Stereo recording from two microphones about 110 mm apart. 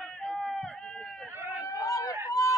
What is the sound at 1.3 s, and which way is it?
Run, 25° right (ahead or behind).